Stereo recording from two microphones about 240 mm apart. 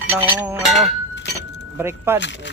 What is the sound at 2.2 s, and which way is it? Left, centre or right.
Speech, left.